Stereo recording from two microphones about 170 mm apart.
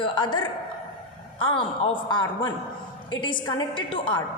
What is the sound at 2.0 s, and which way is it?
A woman's voice, 25° left (ahead or behind).